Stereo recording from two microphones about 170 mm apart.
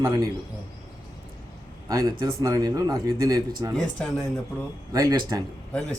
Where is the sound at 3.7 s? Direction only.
5° left (ahead or behind).